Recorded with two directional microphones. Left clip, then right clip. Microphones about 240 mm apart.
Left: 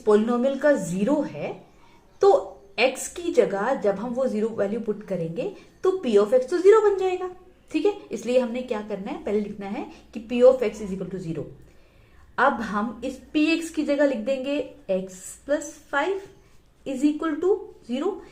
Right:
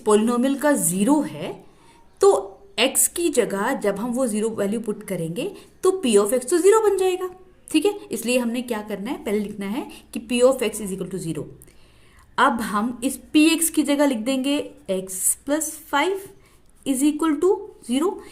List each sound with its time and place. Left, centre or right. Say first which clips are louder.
0.0 s a woman's voice: right 1 dB; right